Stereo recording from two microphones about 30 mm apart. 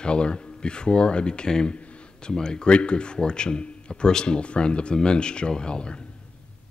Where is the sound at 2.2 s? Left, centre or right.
Left.